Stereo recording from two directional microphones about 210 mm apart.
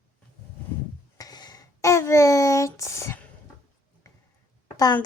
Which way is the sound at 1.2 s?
20° left (ahead or behind).